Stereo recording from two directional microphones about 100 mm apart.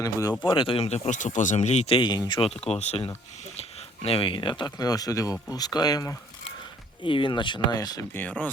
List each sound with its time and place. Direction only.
0.0 s speech: 35° left (ahead or behind)
0.4 s speech: 60° left (ahead or behind); by 1.1 s 90° left
1.5 s speech: 80° left
2.0 s speech: 45° left (ahead or behind)
2.6 s speech: 90° left; by 6.1 s 40° left (ahead or behind)
7.0 s speech: 55° left (ahead or behind); by 8.0 s 40° left (ahead or behind)
8.1 s speech: 15° left (ahead or behind)